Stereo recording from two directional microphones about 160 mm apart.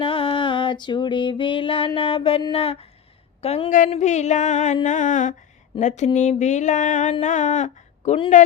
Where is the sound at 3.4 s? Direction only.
40° left (ahead or behind).